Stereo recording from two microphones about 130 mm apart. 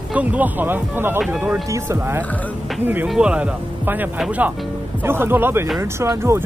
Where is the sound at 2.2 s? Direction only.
10° left (ahead or behind).